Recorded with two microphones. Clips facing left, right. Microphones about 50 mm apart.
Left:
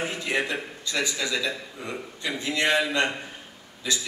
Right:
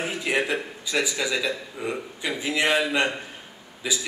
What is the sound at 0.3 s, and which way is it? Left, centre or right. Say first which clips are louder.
A man's voice: right 4 dB; centre.